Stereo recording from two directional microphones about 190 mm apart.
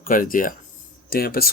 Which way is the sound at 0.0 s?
45° left (ahead or behind).